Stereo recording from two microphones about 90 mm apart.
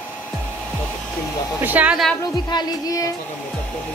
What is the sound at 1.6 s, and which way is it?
Speech, 20° right (ahead or behind).